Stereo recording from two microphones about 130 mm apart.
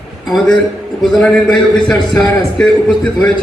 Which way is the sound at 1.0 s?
5° left (ahead or behind).